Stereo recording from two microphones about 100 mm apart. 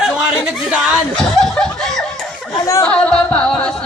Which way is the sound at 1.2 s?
5° left (ahead or behind).